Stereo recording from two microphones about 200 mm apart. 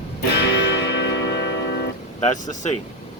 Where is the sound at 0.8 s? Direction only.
55° left (ahead or behind).